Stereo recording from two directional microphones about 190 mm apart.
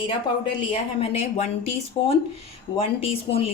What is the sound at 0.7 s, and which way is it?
A woman's voice, 35° left (ahead or behind).